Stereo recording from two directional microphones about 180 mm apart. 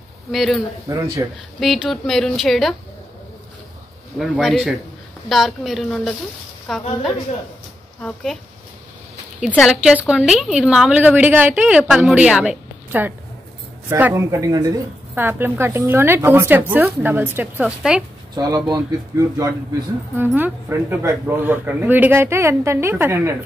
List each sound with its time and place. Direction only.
0.3 s a woman's voice: centre (ahead or behind)
1.2 s speech: 20° right (ahead or behind)
1.6 s a woman's voice: centre (ahead or behind)
4.2 s a woman's voice: centre (ahead or behind)
8.0 s a woman's voice: centre (ahead or behind)
9.5 s a woman's voice: centre (ahead or behind)
18.3 s speech: 20° right (ahead or behind)